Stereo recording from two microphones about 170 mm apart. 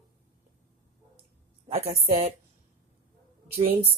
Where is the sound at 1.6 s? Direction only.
35° right (ahead or behind).